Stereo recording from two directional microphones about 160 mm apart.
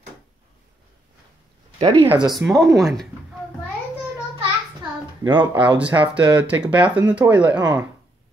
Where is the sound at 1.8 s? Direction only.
35° right (ahead or behind).